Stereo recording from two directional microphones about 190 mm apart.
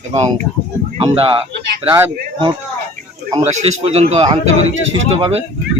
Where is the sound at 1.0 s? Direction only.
30° right (ahead or behind).